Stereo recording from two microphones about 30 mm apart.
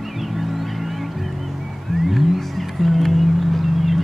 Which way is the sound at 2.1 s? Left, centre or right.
Centre.